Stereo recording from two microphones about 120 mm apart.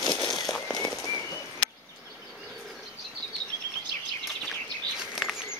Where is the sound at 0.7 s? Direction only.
30° left (ahead or behind).